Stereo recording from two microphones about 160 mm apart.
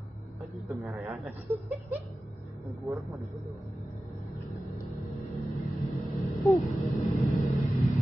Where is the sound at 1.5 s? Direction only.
15° right (ahead or behind).